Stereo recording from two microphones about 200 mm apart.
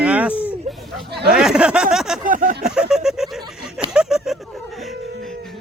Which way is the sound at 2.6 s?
5° right (ahead or behind).